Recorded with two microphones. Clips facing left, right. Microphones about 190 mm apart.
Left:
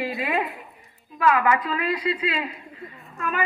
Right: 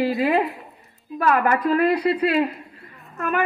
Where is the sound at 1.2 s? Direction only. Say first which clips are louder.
Right 2 dB; 45° right (ahead or behind).